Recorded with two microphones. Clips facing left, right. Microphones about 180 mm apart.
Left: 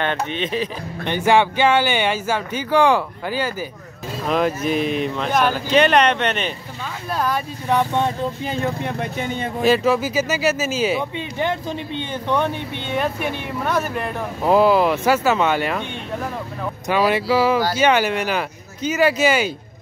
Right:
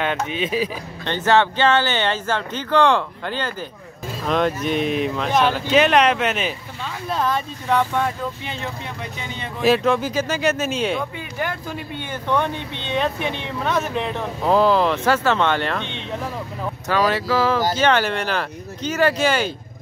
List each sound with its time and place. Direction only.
0.0 s speech: 5° right (ahead or behind)
1.0 s speech: 10° left (ahead or behind)
7.7 s speech: 20° left (ahead or behind)
8.5 s speech: 50° left (ahead or behind)
9.6 s speech: centre (ahead or behind)
11.3 s speech: 20° left (ahead or behind)